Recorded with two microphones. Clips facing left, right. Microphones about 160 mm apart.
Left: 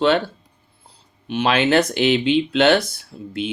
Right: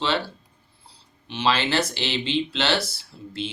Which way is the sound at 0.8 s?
55° left (ahead or behind).